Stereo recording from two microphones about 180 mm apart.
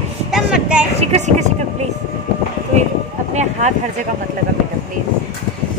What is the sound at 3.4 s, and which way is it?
Speech, 40° right (ahead or behind).